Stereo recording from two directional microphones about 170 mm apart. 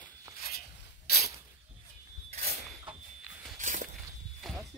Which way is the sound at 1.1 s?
65° left (ahead or behind).